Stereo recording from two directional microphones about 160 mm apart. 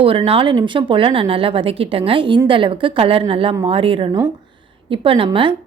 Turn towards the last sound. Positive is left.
turn(degrees=-30)  # may be behind; listen again after turning